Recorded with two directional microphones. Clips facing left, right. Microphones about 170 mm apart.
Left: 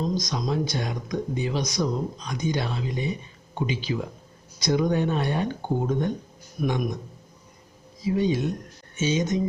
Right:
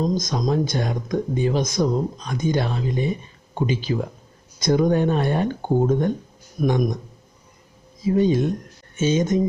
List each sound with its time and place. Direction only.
0.0 s speech: 50° right (ahead or behind)
8.0 s speech: 45° right (ahead or behind)